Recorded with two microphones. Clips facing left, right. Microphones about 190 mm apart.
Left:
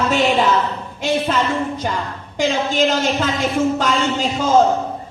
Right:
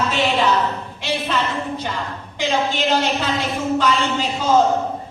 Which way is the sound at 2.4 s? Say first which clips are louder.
Left 3 dB; 45° left (ahead or behind).